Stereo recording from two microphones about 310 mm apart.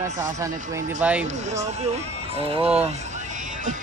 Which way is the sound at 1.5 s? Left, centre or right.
Right.